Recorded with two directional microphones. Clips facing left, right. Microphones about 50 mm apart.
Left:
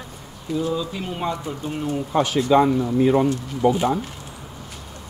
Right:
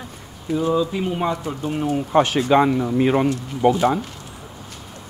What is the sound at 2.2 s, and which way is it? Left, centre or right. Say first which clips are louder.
Speech: even; right.